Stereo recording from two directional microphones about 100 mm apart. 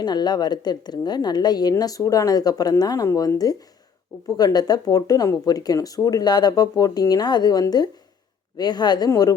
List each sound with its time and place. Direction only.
0.0 s a woman's voice: 45° left (ahead or behind)